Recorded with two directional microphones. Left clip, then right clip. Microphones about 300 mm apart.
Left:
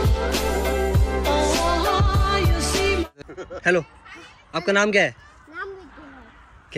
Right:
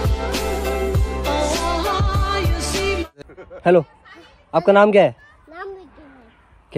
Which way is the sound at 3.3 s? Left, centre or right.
Left.